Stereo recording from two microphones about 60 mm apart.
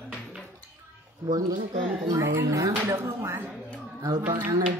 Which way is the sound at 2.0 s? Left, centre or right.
Right.